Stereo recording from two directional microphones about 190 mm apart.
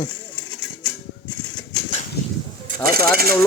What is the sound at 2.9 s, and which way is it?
Speech, 55° right (ahead or behind).